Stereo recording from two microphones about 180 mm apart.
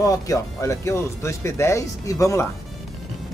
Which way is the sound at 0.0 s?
20° left (ahead or behind).